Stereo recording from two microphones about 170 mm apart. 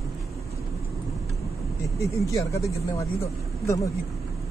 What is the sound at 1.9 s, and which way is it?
Speech, 20° left (ahead or behind).